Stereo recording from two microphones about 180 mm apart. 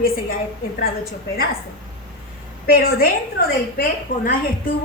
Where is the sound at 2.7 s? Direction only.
55° left (ahead or behind).